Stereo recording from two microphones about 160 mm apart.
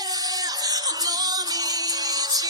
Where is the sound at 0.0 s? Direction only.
25° right (ahead or behind).